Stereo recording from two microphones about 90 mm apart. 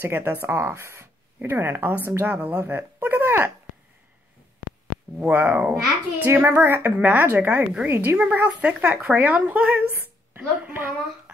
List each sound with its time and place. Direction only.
0.0 s speech: 25° right (ahead or behind)
5.2 s a woman's voice: 20° right (ahead or behind)